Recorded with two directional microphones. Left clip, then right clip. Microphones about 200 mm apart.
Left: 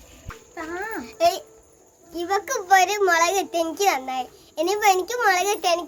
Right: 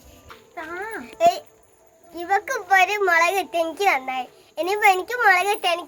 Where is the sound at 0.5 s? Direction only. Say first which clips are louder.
Left 1 dB; 30° left (ahead or behind).